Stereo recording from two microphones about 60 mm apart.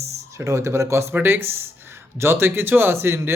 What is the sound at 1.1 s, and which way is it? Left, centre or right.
Speech, right.